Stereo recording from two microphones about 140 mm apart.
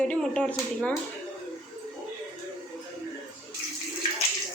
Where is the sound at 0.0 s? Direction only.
5° left (ahead or behind).